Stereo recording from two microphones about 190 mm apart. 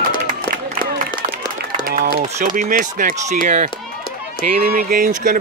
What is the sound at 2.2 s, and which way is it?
Speech, 40° right (ahead or behind).